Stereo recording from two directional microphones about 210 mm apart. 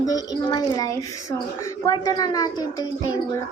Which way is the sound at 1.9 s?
20° left (ahead or behind).